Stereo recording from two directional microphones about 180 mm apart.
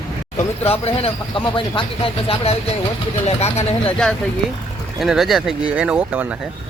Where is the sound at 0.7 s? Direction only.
35° left (ahead or behind).